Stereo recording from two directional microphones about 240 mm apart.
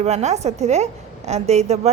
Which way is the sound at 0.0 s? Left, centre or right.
Right.